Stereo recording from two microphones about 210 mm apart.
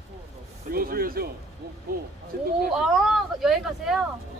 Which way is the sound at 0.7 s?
45° right (ahead or behind).